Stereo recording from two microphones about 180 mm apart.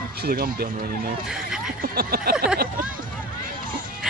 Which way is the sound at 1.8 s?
55° right (ahead or behind).